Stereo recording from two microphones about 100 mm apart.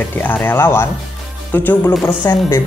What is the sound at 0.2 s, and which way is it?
Speech, 20° left (ahead or behind).